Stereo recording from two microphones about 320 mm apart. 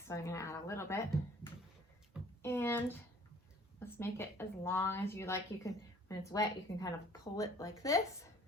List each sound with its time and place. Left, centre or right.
0.1 s a woman's voice: centre
2.4 s a sound: centre
3.8 s a woman's voice: centre